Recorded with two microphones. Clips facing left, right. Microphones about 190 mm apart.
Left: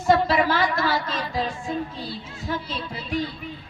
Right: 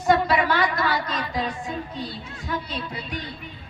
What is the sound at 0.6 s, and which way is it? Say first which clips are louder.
Speech: left 1 dB; 25° left (ahead or behind).